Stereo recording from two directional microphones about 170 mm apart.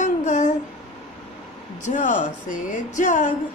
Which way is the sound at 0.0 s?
45° left (ahead or behind).